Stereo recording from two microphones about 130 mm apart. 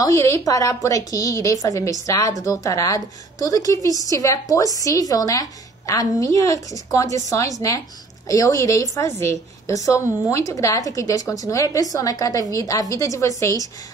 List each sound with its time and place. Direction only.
0.0 s a woman's voice: 25° left (ahead or behind)